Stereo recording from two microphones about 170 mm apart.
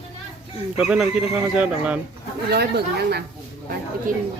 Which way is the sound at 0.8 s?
5° right (ahead or behind).